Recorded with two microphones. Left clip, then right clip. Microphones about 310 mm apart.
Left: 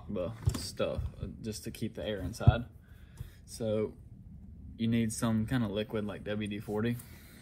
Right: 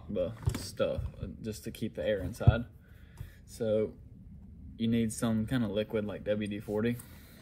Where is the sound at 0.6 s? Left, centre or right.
Left.